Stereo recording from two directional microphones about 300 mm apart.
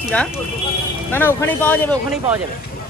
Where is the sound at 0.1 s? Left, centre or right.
Centre.